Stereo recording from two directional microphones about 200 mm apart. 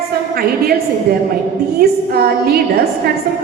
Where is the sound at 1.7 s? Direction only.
50° right (ahead or behind).